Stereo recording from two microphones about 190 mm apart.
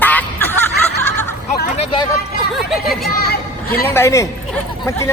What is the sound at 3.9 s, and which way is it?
Speech, 15° left (ahead or behind).